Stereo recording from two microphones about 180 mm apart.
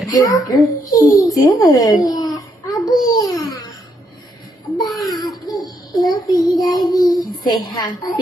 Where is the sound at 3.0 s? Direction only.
20° left (ahead or behind).